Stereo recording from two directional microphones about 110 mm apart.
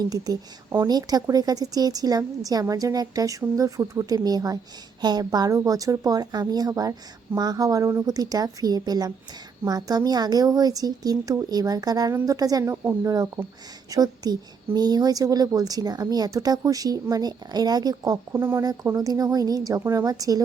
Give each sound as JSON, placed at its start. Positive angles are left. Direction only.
{"t": 0.0, "sound": "a woman's voice", "side_deg": -35}
{"t": 12.7, "sound": "a woman's voice", "side_deg": -20}
{"t": 18.6, "sound": "a woman's voice", "side_deg": -35}